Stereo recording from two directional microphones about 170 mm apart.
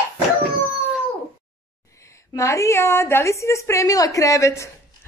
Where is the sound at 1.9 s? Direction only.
15° left (ahead or behind).